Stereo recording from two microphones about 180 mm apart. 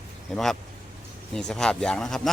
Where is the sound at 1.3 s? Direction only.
5° left (ahead or behind).